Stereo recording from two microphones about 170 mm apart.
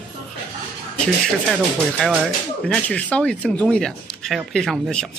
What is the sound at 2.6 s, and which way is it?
Speech, 5° left (ahead or behind).